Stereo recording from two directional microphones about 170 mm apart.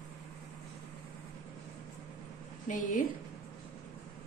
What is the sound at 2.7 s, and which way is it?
Speech, 50° left (ahead or behind).